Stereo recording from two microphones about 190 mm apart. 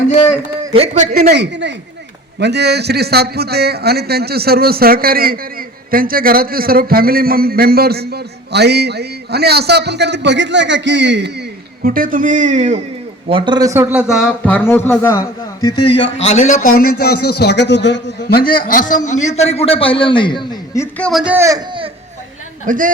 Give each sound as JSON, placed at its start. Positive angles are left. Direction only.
{"t": 0.7, "sound": "a man's voice", "side_deg": -35}
{"t": 1.3, "sound": "a woman's voice", "side_deg": -65}
{"t": 13.2, "sound": "a man's voice", "side_deg": -25}
{"t": 14.4, "sound": "a man's voice", "side_deg": 10}
{"t": 16.2, "sound": "a man's voice", "side_deg": 40}
{"t": 21.0, "sound": "a man's voice", "side_deg": 0}
{"t": 21.3, "sound": "speech", "side_deg": -15}
{"t": 22.6, "sound": "a man's voice", "side_deg": -45}